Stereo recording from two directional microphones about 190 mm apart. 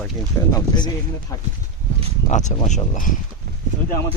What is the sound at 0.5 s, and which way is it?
Speech, 20° left (ahead or behind).